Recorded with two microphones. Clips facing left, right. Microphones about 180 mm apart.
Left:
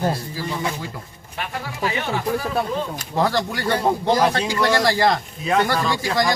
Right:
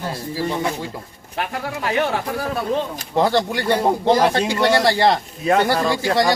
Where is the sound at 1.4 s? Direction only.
60° right (ahead or behind).